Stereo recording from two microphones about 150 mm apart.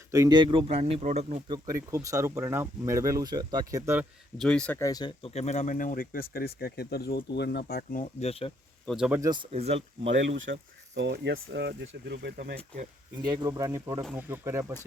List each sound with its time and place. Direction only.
0.1 s speech: 25° right (ahead or behind); by 1.4 s 50° right (ahead or behind)
1.5 s speech: 25° right (ahead or behind)
4.4 s speech: 5° left (ahead or behind)
4.8 s speech: 25° left (ahead or behind)
5.3 s speech: 45° left (ahead or behind); by 6.2 s 70° left (ahead or behind)
6.3 s speech: 90° left
8.2 s speech: 40° left (ahead or behind)
8.9 s speech: 5° right (ahead or behind)
9.2 s speech: 30° right (ahead or behind)
9.5 s speech: 45° right (ahead or behind)
10.5 s speech: 90° right
11.8 s speech: 90° right
13.1 s speech: 25° right (ahead or behind)